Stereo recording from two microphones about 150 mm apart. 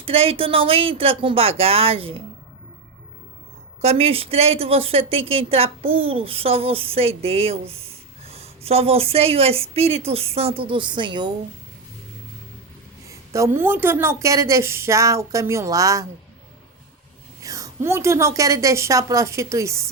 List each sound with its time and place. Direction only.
0.0 s a woman's voice: 40° right (ahead or behind)
3.8 s a woman's voice: 45° right (ahead or behind)
13.1 s a woman's voice: 20° right (ahead or behind)
17.4 s a woman's voice: 20° right (ahead or behind)